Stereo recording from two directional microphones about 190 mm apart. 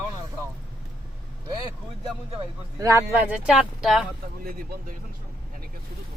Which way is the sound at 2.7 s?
15° right (ahead or behind).